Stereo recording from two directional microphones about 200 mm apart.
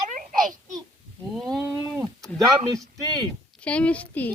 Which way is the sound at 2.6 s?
20° right (ahead or behind).